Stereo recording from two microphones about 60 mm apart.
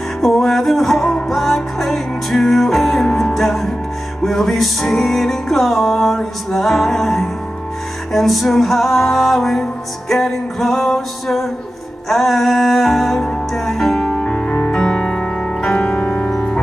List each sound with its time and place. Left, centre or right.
0.2 s music: centre
16.3 s music: centre